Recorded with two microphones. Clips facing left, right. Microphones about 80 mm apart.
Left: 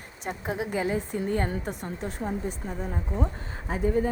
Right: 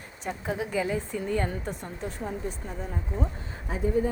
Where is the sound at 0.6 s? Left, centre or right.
Left.